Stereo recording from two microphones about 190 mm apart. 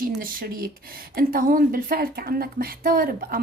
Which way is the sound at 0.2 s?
50° right (ahead or behind).